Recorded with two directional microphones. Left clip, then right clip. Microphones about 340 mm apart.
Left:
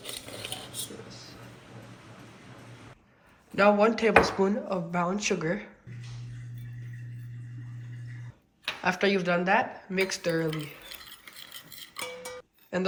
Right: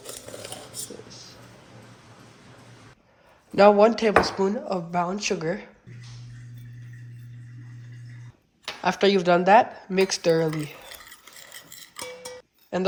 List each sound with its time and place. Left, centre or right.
0.1 s a sound: centre
3.5 s speech: centre
8.8 s speech: centre
12.7 s speech: centre